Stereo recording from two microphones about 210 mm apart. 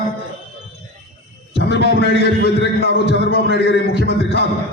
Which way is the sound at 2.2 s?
50° left (ahead or behind).